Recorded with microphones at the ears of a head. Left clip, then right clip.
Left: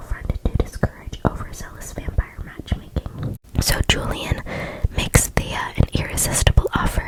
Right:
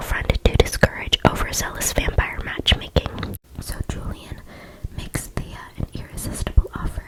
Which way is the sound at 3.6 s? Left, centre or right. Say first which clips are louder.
Left 15 dB; left.